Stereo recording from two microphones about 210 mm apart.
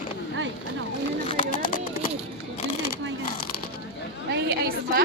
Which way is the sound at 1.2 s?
30° left (ahead or behind).